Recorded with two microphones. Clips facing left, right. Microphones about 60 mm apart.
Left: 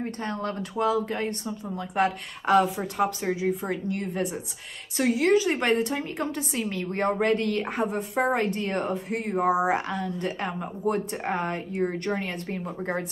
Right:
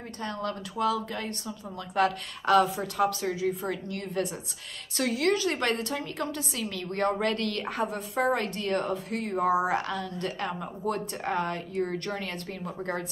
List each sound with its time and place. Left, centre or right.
0.2 s a woman's voice: left